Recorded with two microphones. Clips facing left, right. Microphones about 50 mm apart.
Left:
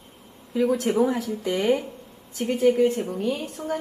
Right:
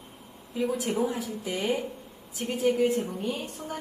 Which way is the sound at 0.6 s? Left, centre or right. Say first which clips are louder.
Left 6 dB; left.